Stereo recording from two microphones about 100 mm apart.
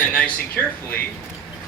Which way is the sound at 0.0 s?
10° left (ahead or behind).